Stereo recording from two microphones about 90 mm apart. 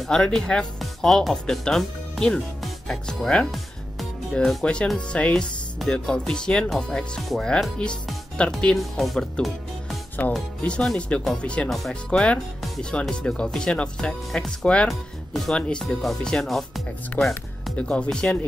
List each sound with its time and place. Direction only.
0.0 s speech: 5° left (ahead or behind)
3.5 s music: centre (ahead or behind)
4.4 s speech: 5° left (ahead or behind)
10.2 s speech: 20° left (ahead or behind)
12.6 s speech: centre (ahead or behind)
17.2 s speech: 30° left (ahead or behind)
17.7 s speech: 15° left (ahead or behind)